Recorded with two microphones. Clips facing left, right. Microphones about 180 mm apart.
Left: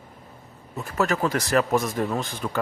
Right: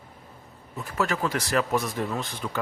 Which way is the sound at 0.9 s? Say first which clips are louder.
Left 3 dB; 45° left (ahead or behind).